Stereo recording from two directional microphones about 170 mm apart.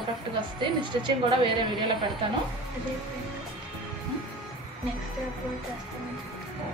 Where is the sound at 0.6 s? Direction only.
30° right (ahead or behind).